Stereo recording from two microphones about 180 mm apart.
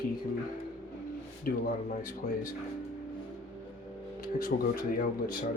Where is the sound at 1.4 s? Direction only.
50° left (ahead or behind).